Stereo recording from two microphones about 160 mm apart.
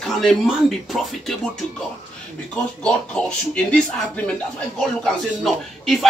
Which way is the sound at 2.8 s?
5° left (ahead or behind).